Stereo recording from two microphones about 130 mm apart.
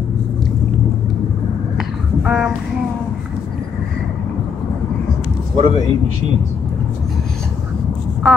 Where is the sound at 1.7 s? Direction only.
5° right (ahead or behind).